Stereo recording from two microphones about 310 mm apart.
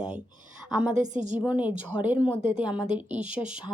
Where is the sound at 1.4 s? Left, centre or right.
Centre.